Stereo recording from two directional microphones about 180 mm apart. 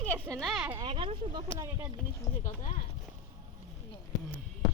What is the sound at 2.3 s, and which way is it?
Speech, 15° left (ahead or behind).